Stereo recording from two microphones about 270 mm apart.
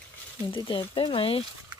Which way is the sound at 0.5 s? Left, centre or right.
Centre.